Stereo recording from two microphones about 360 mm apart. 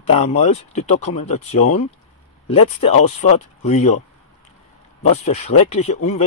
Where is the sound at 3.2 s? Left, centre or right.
Centre.